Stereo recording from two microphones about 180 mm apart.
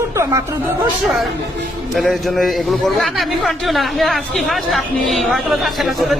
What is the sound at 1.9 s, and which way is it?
A man's voice, centre (ahead or behind).